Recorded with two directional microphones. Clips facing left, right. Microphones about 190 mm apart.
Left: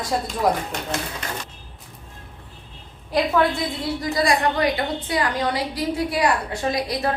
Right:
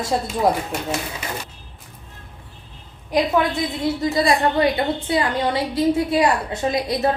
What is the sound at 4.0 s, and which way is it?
A woman's voice, 25° right (ahead or behind).